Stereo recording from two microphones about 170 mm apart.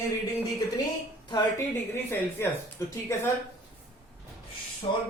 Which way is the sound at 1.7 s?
15° left (ahead or behind).